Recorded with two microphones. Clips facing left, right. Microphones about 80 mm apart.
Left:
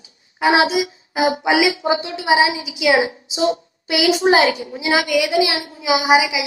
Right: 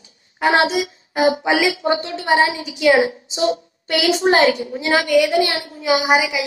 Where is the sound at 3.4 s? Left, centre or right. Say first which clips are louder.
Even; centre.